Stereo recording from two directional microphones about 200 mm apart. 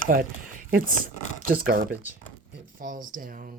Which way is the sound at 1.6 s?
45° right (ahead or behind).